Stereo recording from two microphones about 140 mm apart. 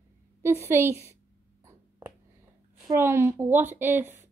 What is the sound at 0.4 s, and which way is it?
Speech, 20° right (ahead or behind).